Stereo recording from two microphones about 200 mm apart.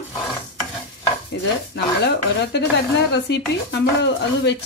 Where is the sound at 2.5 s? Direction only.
60° left (ahead or behind).